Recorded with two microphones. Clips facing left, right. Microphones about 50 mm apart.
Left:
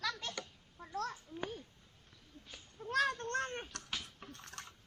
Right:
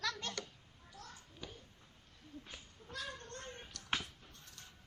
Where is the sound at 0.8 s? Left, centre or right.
Left.